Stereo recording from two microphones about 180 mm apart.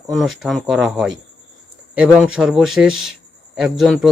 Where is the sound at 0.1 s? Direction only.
Centre (ahead or behind).